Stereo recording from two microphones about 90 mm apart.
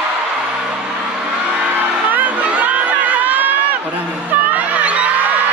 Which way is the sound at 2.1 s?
15° right (ahead or behind).